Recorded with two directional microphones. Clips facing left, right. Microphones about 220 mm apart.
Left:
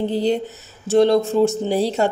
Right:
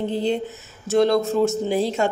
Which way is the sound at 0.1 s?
40° left (ahead or behind).